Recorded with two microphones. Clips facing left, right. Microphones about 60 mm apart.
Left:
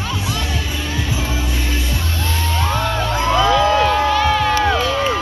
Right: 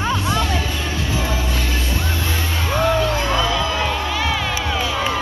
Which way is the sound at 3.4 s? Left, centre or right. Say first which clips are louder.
Left 6 dB; left.